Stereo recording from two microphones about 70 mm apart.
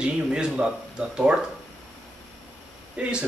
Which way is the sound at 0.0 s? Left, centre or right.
Centre.